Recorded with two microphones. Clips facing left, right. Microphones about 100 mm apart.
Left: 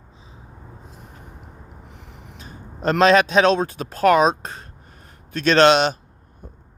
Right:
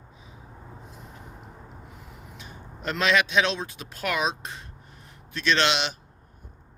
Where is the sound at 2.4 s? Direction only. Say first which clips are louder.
Left 10 dB; 40° left (ahead or behind).